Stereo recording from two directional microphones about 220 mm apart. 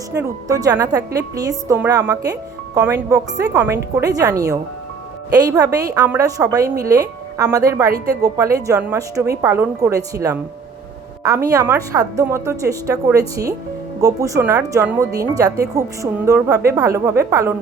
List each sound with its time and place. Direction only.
0.2 s a woman's voice: 15° right (ahead or behind)